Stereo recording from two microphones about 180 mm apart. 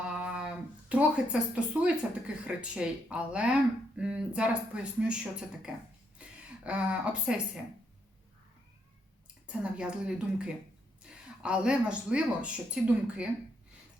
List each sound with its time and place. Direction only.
0.0 s a woman's voice: 5° right (ahead or behind)
6.2 s a sound: 5° right (ahead or behind)
6.7 s a woman's voice: 5° right (ahead or behind)
9.5 s a woman's voice: 5° right (ahead or behind)